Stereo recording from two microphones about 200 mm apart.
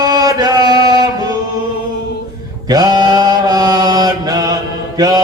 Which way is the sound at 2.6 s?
20° right (ahead or behind).